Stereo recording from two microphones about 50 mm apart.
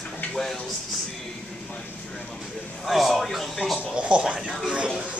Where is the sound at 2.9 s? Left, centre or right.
Centre.